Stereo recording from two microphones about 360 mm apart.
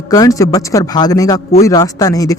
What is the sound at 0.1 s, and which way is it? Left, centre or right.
Speech, centre.